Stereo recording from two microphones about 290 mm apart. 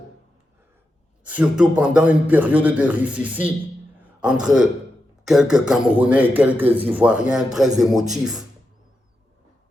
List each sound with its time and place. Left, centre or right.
1.2 s a man's voice: centre